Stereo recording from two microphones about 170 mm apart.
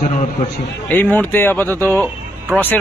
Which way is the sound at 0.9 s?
10° left (ahead or behind).